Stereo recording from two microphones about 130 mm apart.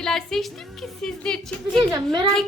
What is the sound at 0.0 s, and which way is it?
A woman's voice, 5° left (ahead or behind).